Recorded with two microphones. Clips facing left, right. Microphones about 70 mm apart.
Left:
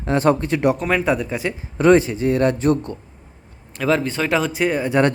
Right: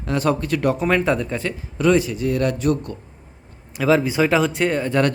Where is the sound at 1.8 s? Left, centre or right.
Left.